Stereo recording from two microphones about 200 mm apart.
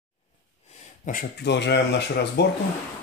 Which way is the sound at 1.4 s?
60° left (ahead or behind).